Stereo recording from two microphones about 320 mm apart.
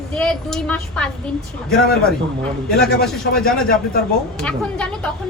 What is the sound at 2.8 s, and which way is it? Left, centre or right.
A woman's voice, centre.